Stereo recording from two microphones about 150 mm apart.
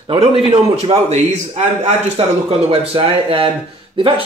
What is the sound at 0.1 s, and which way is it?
A man's voice, 35° right (ahead or behind).